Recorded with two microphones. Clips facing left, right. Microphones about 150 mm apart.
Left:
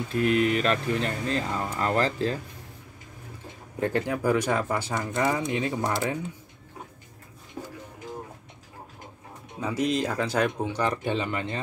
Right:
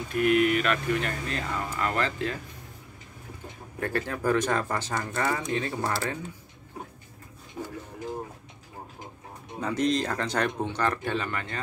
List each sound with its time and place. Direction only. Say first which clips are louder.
0.1 s speech: right 1 dB; 30° left (ahead or behind)
3.8 s speech: left 3 dB; 15° left (ahead or behind)
9.6 s speech: even; 5° left (ahead or behind)